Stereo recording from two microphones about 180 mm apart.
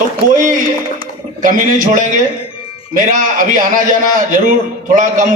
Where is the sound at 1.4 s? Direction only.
50° right (ahead or behind).